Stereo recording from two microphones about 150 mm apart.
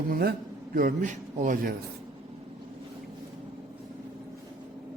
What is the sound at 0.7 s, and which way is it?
Speech, 65° right (ahead or behind).